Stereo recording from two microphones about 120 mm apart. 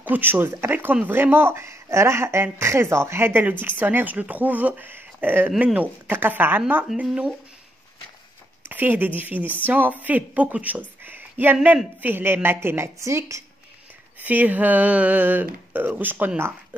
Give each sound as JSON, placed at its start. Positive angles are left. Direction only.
{"t": 0.0, "sound": "speech", "side_deg": -15}
{"t": 6.9, "sound": "speech", "side_deg": -5}
{"t": 8.6, "sound": "speech", "side_deg": -15}
{"t": 14.2, "sound": "speech", "side_deg": -15}